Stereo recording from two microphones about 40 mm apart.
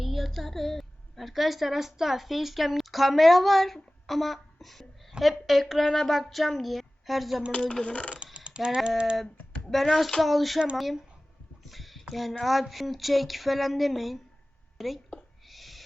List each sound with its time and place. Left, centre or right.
0.0 s a woman's voice: centre
5.8 s speech: centre
7.5 s speech: left
8.1 s a sound: right
8.4 s speech: right
10.2 s a woman's voice: centre
15.4 s owl: centre